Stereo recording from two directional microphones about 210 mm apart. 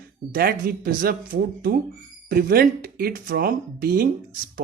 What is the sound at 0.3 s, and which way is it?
Speech, 45° right (ahead or behind).